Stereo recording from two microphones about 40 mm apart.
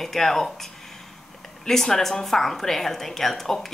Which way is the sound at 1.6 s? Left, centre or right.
Centre.